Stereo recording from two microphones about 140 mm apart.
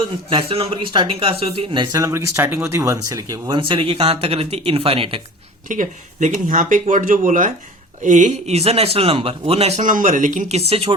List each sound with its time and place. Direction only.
0.0 s speech: 40° right (ahead or behind)
2.0 s speech: 20° right (ahead or behind)
3.6 s speech: 35° right (ahead or behind)
5.6 s speech: 65° right (ahead or behind)
10.7 s speech: 45° right (ahead or behind)